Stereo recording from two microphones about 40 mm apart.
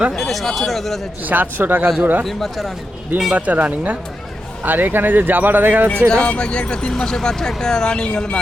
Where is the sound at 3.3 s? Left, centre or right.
Right.